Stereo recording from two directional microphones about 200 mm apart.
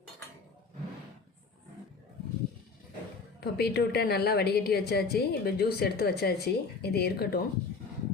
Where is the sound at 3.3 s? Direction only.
55° left (ahead or behind).